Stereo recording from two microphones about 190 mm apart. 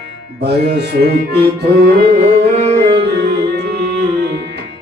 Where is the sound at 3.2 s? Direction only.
60° right (ahead or behind).